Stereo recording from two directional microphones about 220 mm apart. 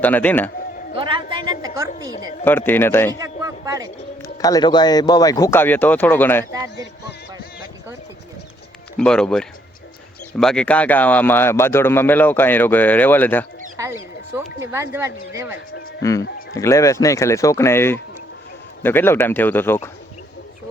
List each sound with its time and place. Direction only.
0.0 s speech: 10° left (ahead or behind)
0.9 s a sound: 25° right (ahead or behind)
2.4 s speech: 10° left (ahead or behind)
3.2 s a sound: 15° right (ahead or behind)
4.2 s speech: 15° left (ahead or behind)
9.0 s speech: 5° left (ahead or behind)
14.3 s speech: 10° right (ahead or behind)
16.0 s speech: 15° left (ahead or behind)